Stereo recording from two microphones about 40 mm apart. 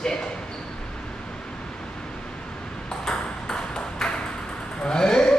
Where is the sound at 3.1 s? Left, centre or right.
Centre.